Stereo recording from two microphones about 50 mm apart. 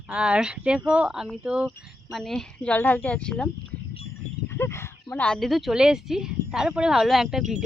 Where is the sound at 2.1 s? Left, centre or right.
Centre.